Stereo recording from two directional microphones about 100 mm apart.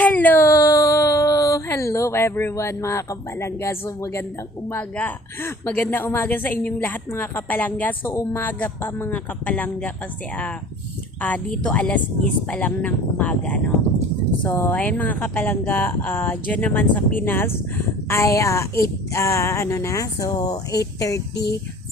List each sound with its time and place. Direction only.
0.0 s a sound: 15° left (ahead or behind)
0.4 s a sound: 35° left (ahead or behind)
4.7 s a woman's voice: 20° left (ahead or behind)
8.1 s speech: 30° left (ahead or behind)
8.4 s speech: 15° left (ahead or behind)
11.2 s a woman's voice: 15° left (ahead or behind); by 21.2 s 35° left (ahead or behind)